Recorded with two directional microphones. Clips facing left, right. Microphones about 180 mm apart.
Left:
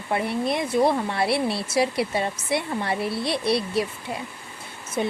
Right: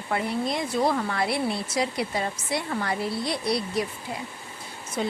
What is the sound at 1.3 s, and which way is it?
Speech, 75° left (ahead or behind).